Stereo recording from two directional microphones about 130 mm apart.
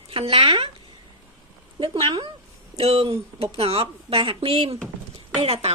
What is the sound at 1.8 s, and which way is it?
A woman's voice, 40° right (ahead or behind).